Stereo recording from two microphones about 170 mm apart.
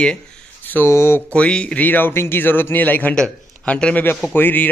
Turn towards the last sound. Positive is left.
turn(degrees=10)  # may be behind; listen again after turning